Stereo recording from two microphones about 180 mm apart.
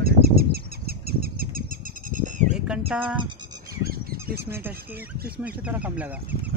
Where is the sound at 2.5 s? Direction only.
5° right (ahead or behind).